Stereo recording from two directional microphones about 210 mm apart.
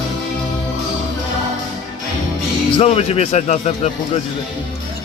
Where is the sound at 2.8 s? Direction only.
30° left (ahead or behind).